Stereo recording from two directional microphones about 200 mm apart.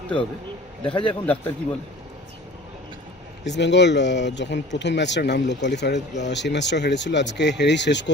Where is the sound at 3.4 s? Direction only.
60° left (ahead or behind).